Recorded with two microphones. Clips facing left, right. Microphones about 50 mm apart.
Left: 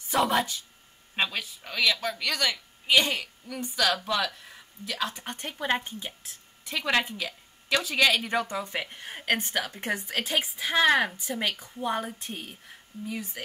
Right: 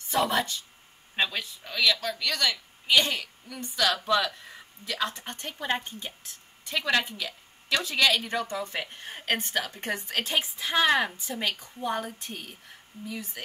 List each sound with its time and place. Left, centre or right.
0.1 s speech: centre
3.4 s speech: centre
4.8 s a woman's voice: centre
9.9 s speech: centre